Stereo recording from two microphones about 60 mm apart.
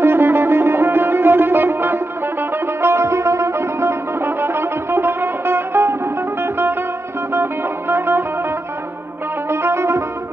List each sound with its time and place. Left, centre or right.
0.0 s music: right
2.8 s music: right
9.5 s music: right